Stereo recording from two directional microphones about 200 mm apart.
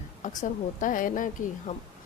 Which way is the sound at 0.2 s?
40° left (ahead or behind).